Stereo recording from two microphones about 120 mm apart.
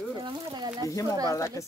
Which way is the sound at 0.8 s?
30° left (ahead or behind).